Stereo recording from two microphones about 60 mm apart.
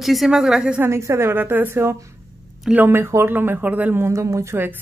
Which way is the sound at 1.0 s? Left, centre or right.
Right.